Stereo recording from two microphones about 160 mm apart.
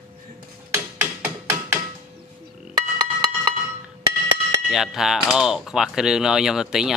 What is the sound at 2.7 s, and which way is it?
Music, 25° right (ahead or behind).